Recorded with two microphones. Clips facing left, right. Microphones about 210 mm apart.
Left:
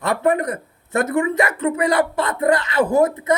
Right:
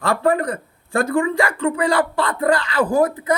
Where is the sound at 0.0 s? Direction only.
20° left (ahead or behind).